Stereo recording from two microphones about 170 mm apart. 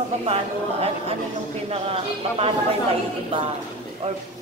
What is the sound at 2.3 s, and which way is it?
Speech, 35° right (ahead or behind).